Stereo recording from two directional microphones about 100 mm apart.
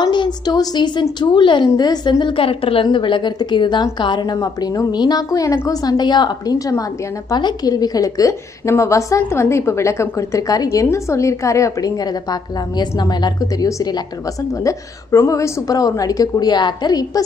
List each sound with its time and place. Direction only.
0.0 s a woman's voice: 50° left (ahead or behind)